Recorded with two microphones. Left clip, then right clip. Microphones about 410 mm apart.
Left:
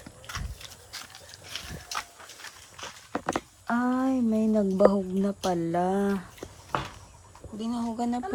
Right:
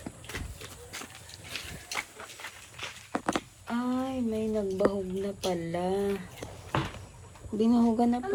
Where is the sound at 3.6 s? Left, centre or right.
Centre.